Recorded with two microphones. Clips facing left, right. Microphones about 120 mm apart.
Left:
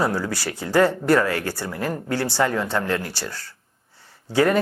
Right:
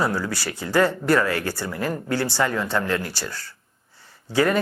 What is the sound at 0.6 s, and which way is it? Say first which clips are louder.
Speech: left 2 dB; 45° left (ahead or behind).